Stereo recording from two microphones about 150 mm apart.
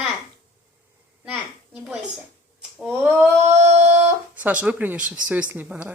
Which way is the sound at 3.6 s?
45° right (ahead or behind).